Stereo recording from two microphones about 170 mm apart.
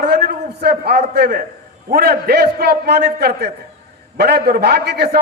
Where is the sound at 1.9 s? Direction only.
65° right (ahead or behind).